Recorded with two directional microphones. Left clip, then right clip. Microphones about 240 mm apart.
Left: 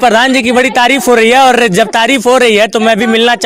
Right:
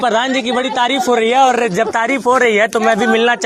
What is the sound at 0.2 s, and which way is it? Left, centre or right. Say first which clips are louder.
Speech: left 7 dB; left.